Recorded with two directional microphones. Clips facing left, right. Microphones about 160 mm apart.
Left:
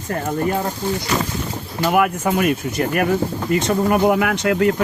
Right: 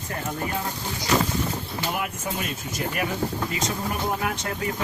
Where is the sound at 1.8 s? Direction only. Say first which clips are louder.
Left 14 dB; 65° left (ahead or behind).